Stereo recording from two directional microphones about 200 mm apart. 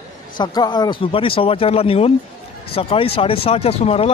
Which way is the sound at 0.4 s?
20° left (ahead or behind).